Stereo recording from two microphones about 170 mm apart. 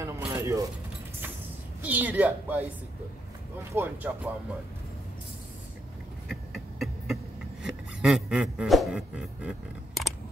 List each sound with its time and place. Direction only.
0.3 s keys jangling: 15° right (ahead or behind)
1.8 s a woman's voice: 10° right (ahead or behind)
3.7 s a woman's voice: 10° right (ahead or behind)
6.2 s a sound: centre (ahead or behind)